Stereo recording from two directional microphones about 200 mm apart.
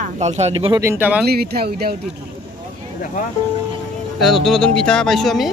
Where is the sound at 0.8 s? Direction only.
10° right (ahead or behind).